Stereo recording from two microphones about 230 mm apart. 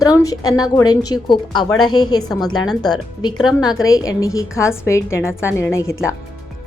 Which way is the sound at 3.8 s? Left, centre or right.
Centre.